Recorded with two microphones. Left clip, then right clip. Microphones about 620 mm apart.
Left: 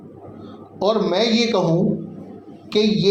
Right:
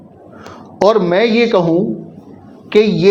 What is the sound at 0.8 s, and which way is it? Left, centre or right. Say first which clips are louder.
Speech: right 7 dB; right.